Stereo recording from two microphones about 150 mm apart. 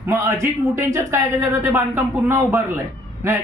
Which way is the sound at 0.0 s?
20° right (ahead or behind).